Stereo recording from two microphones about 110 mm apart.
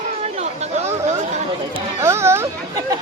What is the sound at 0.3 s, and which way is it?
Chatter, 75° right (ahead or behind).